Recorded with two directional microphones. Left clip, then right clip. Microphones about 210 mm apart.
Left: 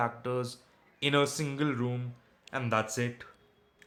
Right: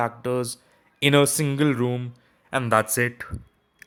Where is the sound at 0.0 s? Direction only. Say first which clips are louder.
Right 7 dB; 30° right (ahead or behind).